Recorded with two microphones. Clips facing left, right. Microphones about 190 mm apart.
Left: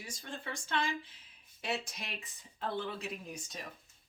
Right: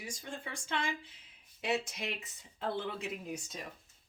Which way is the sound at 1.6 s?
20° right (ahead or behind).